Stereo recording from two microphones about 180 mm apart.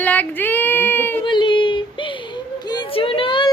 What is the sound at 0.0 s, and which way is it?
Child singing, 10° left (ahead or behind).